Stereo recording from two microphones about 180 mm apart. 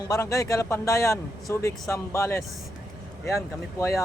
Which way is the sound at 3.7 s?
15° left (ahead or behind).